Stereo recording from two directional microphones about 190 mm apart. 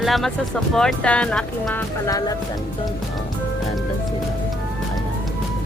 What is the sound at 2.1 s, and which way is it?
Speech, 20° left (ahead or behind).